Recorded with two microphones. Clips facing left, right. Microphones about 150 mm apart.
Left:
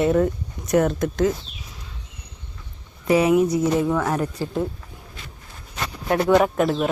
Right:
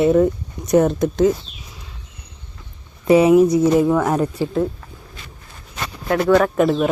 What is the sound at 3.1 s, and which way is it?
Speech, 25° right (ahead or behind).